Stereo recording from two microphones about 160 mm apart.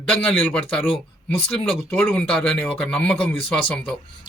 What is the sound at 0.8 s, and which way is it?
Speech, 35° left (ahead or behind).